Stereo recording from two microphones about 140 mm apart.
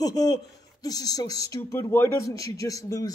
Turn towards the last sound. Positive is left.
turn(degrees=25)  # may be behind; listen again after turning